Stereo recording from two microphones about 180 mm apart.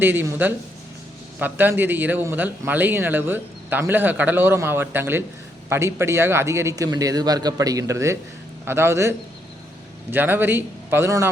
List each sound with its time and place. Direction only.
0.0 s speech: 10° right (ahead or behind)